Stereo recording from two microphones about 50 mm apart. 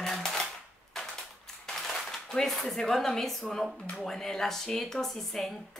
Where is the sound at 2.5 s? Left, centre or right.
Centre.